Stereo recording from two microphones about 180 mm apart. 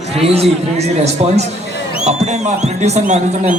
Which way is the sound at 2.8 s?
40° right (ahead or behind).